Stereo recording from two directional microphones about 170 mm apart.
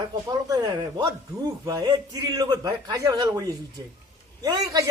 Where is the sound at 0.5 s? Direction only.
25° right (ahead or behind).